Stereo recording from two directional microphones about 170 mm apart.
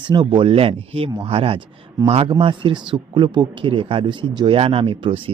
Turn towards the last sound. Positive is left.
turn(degrees=-30)  # may be behind; listen again after turning